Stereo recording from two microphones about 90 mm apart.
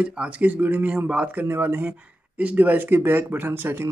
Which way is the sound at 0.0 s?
10° right (ahead or behind).